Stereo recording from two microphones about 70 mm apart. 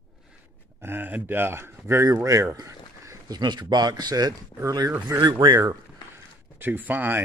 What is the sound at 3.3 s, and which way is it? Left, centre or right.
Speech, right.